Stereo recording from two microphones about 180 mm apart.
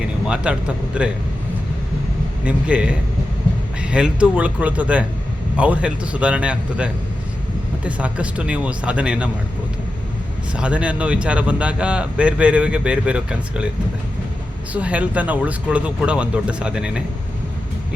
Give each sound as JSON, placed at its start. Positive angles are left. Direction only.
{"t": 0.0, "sound": "speech", "side_deg": -5}
{"t": 2.4, "sound": "speech", "side_deg": -5}
{"t": 10.5, "sound": "speech", "side_deg": -5}
{"t": 14.7, "sound": "speech", "side_deg": -5}